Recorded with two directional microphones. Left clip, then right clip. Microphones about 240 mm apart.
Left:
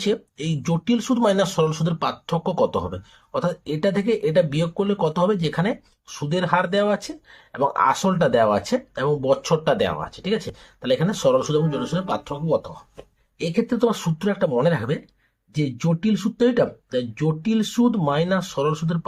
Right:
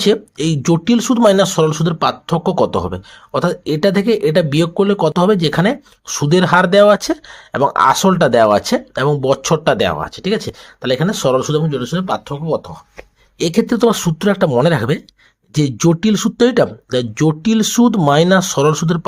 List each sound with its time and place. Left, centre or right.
0.1 s speech: right
13.4 s speech: right